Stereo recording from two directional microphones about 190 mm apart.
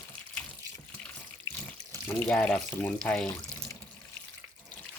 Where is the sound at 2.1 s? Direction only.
10° left (ahead or behind).